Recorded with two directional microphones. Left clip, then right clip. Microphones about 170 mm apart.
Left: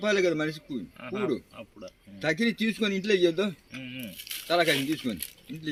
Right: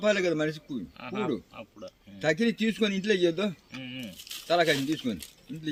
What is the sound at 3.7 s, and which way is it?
Speech, 10° left (ahead or behind).